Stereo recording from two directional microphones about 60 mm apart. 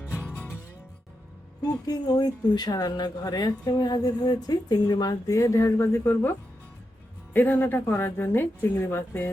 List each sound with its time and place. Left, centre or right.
1.6 s speech: left
7.3 s a woman's voice: left